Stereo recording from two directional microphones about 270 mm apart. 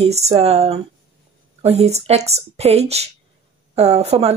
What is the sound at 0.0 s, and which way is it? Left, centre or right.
A woman's voice, right.